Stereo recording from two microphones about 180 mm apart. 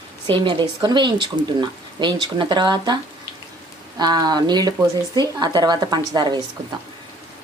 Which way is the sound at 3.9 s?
20° right (ahead or behind).